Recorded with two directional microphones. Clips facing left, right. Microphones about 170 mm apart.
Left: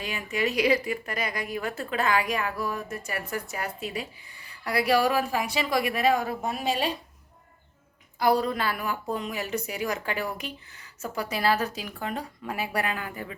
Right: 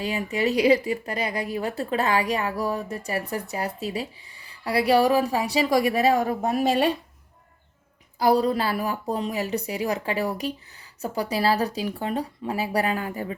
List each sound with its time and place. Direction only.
0.0 s speech: 35° right (ahead or behind)
8.2 s speech: 30° right (ahead or behind)